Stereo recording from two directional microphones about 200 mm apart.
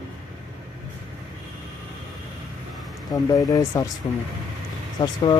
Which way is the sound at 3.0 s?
20° left (ahead or behind).